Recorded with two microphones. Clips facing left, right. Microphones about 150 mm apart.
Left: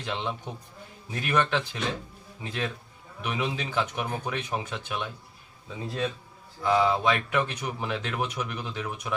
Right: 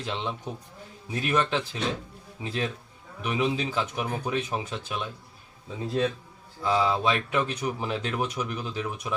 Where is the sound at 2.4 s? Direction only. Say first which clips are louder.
Right 2 dB; 35° right (ahead or behind).